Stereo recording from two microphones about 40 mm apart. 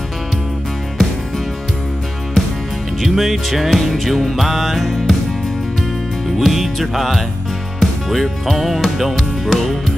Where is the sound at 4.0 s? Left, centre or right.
Centre.